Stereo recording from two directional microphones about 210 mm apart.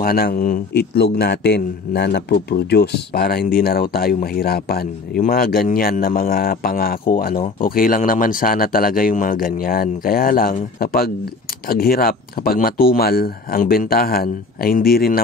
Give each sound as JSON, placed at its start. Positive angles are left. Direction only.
{"t": 0.0, "sound": "a man's voice", "side_deg": 45}